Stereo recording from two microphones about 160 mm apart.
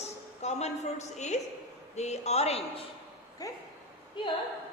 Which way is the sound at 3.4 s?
20° left (ahead or behind).